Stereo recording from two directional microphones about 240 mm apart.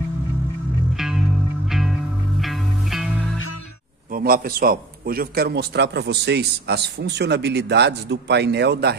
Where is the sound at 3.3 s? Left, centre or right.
Left.